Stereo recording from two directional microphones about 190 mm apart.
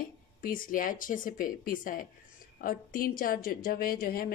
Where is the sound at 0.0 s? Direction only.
50° left (ahead or behind).